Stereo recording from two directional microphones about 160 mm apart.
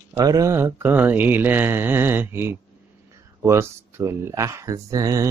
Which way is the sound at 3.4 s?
15° right (ahead or behind).